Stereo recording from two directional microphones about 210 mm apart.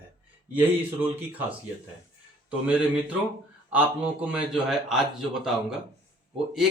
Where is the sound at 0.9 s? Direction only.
10° right (ahead or behind).